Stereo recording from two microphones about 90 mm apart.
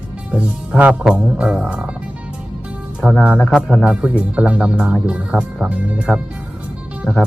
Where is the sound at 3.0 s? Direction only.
15° left (ahead or behind).